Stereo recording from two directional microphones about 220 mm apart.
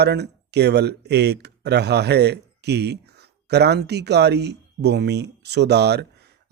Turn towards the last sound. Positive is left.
turn(degrees=-50)  # may be behind; listen again after turning